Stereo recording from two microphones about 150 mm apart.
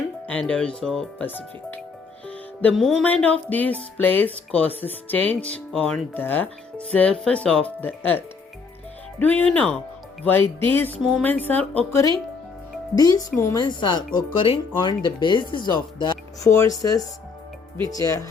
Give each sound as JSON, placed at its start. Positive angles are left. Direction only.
{"t": 0.3, "sound": "speech", "side_deg": 10}
{"t": 2.2, "sound": "music", "side_deg": 10}
{"t": 3.9, "sound": "speech", "side_deg": 10}
{"t": 9.4, "sound": "speech", "side_deg": 10}
{"t": 13.0, "sound": "speech", "side_deg": 25}